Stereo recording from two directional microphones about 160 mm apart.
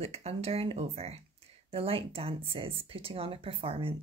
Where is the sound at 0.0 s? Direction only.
40° right (ahead or behind).